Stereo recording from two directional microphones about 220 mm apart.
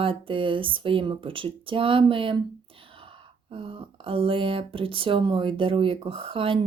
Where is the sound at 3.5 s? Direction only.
25° right (ahead or behind).